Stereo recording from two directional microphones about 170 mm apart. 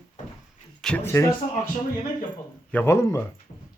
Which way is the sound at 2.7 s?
15° left (ahead or behind).